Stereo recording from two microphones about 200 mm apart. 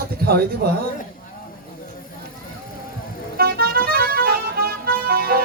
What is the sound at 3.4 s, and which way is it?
Music, 50° right (ahead or behind).